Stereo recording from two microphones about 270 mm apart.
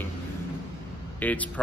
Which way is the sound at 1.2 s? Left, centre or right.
Centre.